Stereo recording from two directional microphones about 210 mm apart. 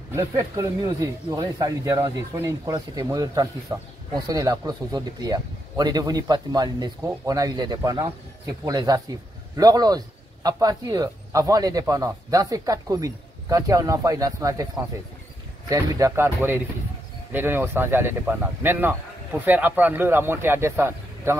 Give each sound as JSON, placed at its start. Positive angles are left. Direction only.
{"t": 0.1, "sound": "a man's voice", "side_deg": -15}
{"t": 15.7, "sound": "a man's voice", "side_deg": -15}